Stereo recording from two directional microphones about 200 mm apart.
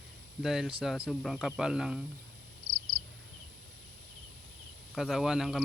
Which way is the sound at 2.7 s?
90° right.